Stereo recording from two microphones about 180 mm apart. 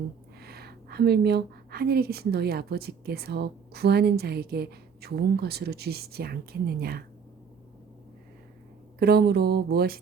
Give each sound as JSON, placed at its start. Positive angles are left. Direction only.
{"t": 0.4, "sound": "speech", "side_deg": -60}
{"t": 9.0, "sound": "speech", "side_deg": -60}